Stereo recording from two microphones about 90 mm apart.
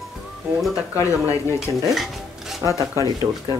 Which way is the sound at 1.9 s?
Centre (ahead or behind).